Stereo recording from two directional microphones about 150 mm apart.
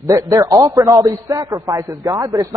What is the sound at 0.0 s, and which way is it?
A man's voice, 20° right (ahead or behind).